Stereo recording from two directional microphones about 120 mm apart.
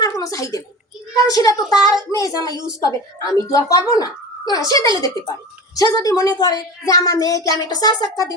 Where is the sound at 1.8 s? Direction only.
30° left (ahead or behind).